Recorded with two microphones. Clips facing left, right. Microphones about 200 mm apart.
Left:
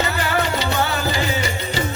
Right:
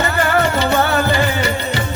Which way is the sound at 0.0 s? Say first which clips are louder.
Right 5 dB; 55° right (ahead or behind).